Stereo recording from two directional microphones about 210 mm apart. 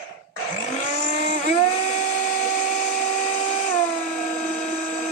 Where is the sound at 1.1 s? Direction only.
35° left (ahead or behind).